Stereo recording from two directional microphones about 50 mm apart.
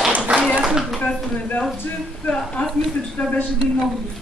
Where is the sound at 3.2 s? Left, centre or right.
Left.